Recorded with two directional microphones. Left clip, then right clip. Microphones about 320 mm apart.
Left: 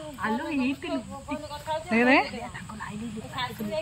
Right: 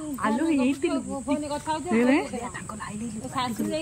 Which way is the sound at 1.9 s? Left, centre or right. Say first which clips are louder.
Left 3 dB; centre.